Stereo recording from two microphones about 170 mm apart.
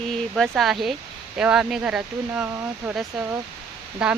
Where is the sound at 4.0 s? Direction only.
5° right (ahead or behind).